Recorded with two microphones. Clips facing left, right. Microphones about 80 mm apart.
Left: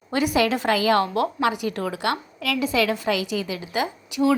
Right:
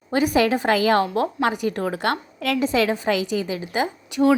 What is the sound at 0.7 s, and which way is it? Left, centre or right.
A woman's voice, right.